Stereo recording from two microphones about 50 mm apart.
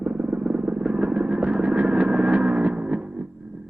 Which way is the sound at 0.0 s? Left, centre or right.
Centre.